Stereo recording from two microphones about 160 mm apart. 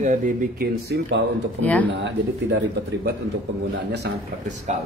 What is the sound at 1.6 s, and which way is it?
Speech, 10° left (ahead or behind).